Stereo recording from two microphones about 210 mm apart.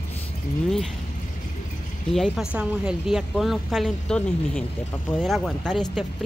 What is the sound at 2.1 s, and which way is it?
A woman's voice, centre (ahead or behind).